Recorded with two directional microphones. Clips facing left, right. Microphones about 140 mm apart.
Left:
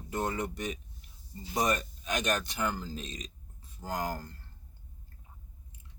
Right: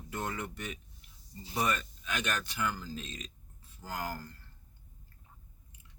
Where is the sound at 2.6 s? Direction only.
25° left (ahead or behind).